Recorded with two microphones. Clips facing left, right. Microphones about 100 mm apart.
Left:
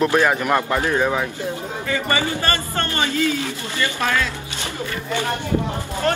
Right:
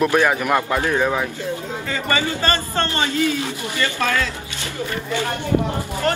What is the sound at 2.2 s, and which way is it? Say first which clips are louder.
A man's voice: right 1 dB; 25° right (ahead or behind).